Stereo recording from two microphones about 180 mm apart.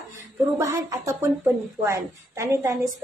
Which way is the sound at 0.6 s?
15° right (ahead or behind).